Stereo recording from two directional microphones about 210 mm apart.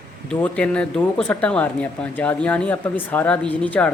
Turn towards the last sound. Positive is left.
turn(degrees=5)  # may be behind; listen again after turning